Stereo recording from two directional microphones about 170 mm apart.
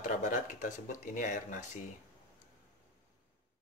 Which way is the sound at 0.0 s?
50° left (ahead or behind).